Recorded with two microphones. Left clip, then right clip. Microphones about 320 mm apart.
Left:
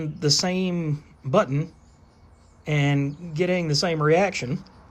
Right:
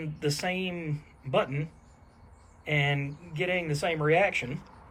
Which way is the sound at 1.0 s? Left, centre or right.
Centre.